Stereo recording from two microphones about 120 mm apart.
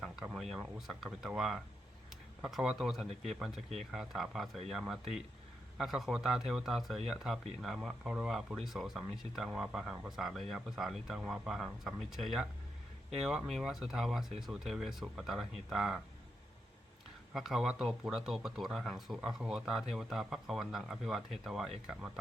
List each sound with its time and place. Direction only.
0.0 s speech: centre (ahead or behind)
17.3 s speech: centre (ahead or behind)